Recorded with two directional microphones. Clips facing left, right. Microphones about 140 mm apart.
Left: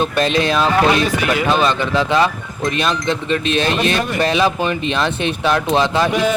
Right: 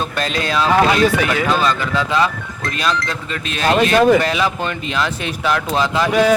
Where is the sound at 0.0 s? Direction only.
25° left (ahead or behind).